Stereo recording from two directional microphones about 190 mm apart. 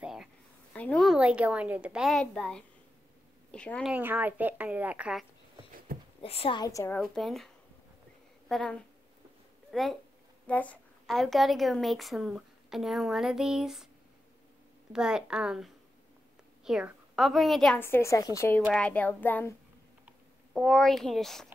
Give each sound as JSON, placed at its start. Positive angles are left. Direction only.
{"t": 0.0, "sound": "a sound", "side_deg": 0}
{"t": 0.7, "sound": "a woman's voice", "side_deg": 5}
{"t": 3.9, "sound": "a woman's voice", "side_deg": -10}
{"t": 5.9, "sound": "a sound", "side_deg": -50}
{"t": 6.2, "sound": "a woman's voice", "side_deg": 30}
{"t": 7.0, "sound": "a woman's voice", "side_deg": 0}
{"t": 14.9, "sound": "a woman's voice", "side_deg": -5}
{"t": 20.1, "sound": "a child's voice", "side_deg": 0}